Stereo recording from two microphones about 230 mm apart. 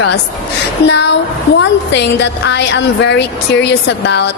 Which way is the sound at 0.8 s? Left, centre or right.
Left.